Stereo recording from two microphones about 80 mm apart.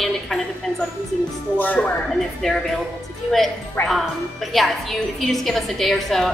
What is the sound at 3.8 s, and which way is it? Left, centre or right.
Speech, left.